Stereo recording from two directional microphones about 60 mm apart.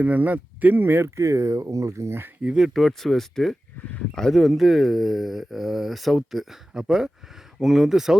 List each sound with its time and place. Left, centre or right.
0.0 s speech: right
1.0 s speech: right
2.4 s speech: centre
2.7 s speech: centre